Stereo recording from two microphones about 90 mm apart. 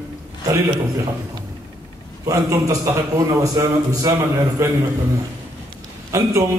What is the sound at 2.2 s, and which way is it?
A man's voice, 35° right (ahead or behind).